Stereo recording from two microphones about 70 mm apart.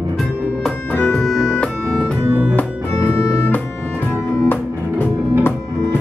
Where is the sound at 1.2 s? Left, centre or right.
Centre.